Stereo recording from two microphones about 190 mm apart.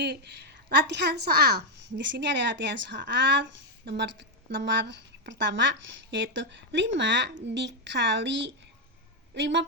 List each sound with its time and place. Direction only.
0.0 s a woman's voice: 60° right (ahead or behind)